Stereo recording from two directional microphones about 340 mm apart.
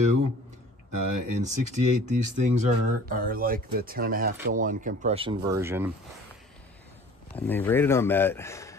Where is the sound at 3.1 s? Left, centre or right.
Right; by 5.9 s centre.